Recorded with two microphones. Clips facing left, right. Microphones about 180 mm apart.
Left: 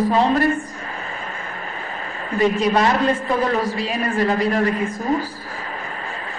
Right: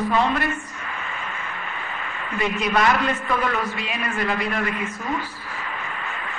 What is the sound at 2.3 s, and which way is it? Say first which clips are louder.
A man's voice: left 5 dB; 35° left (ahead or behind).